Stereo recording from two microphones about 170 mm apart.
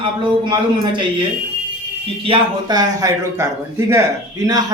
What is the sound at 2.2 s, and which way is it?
A man's voice, 25° right (ahead or behind).